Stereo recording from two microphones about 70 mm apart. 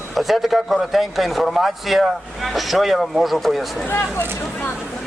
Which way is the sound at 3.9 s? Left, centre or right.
Left.